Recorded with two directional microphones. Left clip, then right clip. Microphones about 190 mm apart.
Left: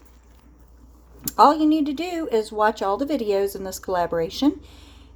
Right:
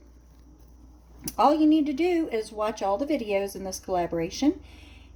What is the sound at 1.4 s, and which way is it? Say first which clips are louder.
A woman's voice: left 5 dB; 30° left (ahead or behind).